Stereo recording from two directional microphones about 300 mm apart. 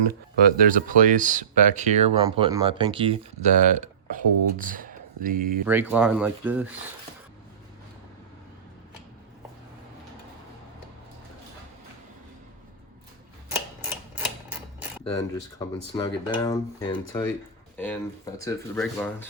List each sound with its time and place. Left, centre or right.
0.3 s speech: right
5.6 s speech: centre
14.5 s cutlery: centre
15.0 s speech: centre